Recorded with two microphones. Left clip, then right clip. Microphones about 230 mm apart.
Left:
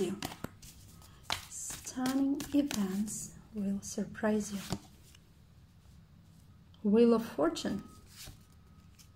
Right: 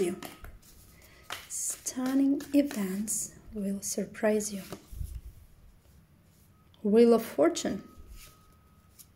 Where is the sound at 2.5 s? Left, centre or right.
Centre.